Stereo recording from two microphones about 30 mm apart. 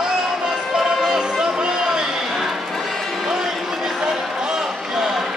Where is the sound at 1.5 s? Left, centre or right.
Right.